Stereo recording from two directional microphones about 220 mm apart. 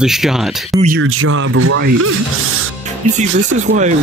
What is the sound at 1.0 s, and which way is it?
Speech, 70° right (ahead or behind).